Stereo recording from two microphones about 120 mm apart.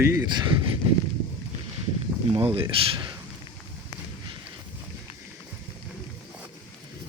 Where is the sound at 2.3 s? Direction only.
50° right (ahead or behind).